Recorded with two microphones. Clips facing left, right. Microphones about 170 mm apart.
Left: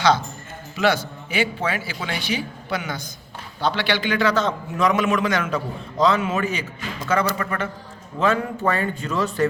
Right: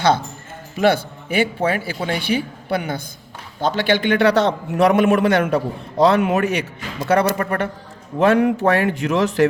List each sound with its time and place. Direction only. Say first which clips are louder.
0.8 s a man's voice: right 4 dB; 55° right (ahead or behind)
2.2 s a man's voice: right 5 dB; 55° right (ahead or behind)
8.2 s speech: right 6 dB; 70° right (ahead or behind); by 9.5 s 90° right